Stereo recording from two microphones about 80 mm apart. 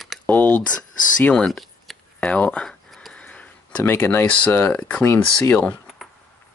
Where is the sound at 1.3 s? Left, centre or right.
Centre.